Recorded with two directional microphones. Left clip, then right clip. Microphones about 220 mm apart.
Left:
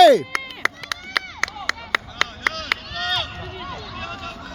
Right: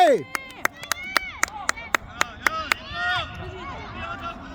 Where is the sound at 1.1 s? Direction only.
60° right (ahead or behind).